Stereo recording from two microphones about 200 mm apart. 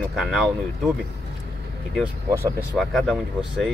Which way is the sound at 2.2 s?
15° right (ahead or behind).